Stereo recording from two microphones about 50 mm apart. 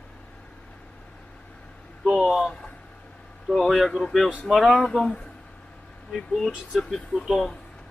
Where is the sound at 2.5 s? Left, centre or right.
Centre.